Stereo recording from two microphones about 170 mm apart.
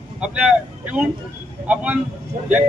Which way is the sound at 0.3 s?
5° right (ahead or behind).